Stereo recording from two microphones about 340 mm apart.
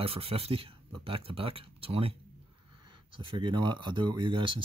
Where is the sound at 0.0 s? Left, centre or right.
Centre.